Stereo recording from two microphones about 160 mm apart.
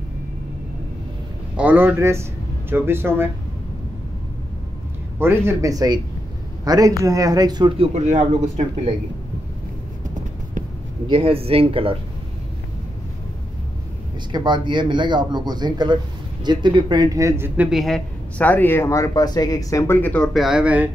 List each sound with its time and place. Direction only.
1.6 s speech: 10° right (ahead or behind)
5.2 s a man's voice: 15° right (ahead or behind)
7.9 s speech: 45° right (ahead or behind)
11.1 s speech: 35° right (ahead or behind)
14.3 s speech: 30° right (ahead or behind)
17.6 s speech: centre (ahead or behind)